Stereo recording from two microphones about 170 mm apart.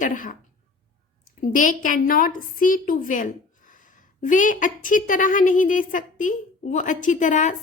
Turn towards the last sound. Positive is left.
turn(degrees=45)  # may be behind; listen again after turning